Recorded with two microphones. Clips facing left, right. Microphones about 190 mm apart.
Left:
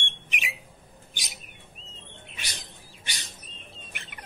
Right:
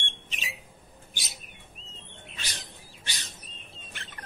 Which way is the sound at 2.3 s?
15° left (ahead or behind).